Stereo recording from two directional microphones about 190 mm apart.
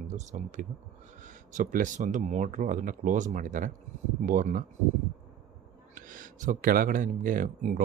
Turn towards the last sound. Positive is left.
turn(degrees=-45)  # may be behind; listen again after turning